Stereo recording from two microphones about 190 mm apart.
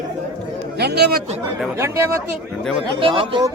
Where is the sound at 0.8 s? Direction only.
60° right (ahead or behind).